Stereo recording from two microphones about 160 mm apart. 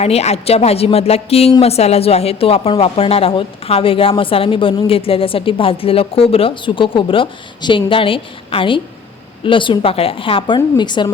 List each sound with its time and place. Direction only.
0.0 s speech: 40° left (ahead or behind)